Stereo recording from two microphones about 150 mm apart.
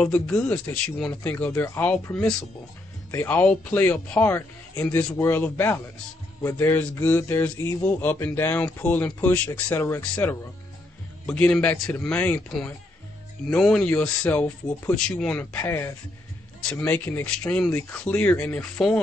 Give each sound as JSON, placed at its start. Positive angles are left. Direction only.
{"t": 0.0, "sound": "speech", "side_deg": 10}
{"t": 15.6, "sound": "speech", "side_deg": 20}